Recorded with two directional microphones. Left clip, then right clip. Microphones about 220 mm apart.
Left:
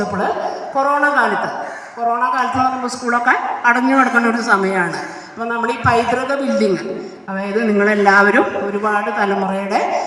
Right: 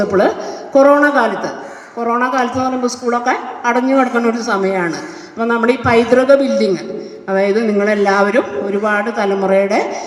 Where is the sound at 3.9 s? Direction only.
50° right (ahead or behind).